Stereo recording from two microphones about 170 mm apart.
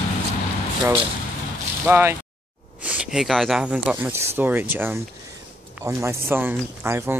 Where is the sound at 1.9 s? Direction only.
15° right (ahead or behind).